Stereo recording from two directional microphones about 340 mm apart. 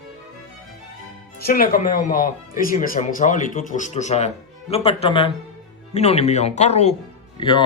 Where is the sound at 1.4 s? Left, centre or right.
Left.